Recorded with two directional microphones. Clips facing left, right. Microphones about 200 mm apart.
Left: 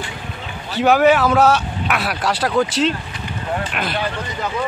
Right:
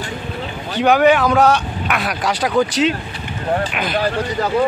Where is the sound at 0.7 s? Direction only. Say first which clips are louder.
Right 1 dB; 5° left (ahead or behind).